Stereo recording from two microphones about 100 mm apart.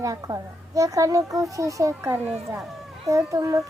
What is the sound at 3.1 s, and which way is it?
Speech, 30° right (ahead or behind).